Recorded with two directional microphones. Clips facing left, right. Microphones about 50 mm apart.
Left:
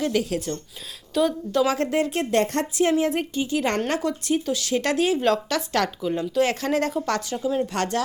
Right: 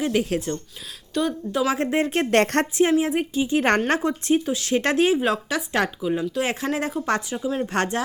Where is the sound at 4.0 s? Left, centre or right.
Right.